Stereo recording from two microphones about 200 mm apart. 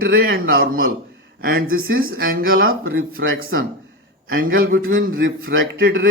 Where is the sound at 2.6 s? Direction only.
90° right.